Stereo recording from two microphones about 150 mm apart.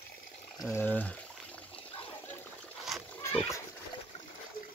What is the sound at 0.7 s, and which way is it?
Speech, 10° left (ahead or behind).